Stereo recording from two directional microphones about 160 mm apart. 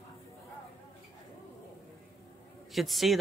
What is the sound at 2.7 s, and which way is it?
Speech, centre (ahead or behind).